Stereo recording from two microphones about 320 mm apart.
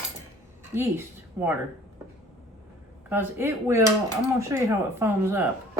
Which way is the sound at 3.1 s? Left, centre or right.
Centre.